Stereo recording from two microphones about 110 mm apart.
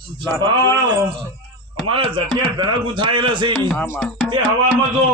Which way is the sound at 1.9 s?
50° right (ahead or behind).